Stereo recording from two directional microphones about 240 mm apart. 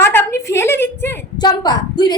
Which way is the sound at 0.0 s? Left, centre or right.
Centre.